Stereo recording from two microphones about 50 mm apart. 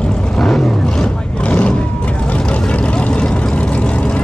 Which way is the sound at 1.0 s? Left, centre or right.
Left.